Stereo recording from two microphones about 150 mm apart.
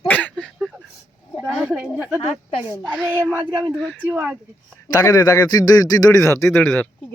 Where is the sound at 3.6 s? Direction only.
Centre (ahead or behind).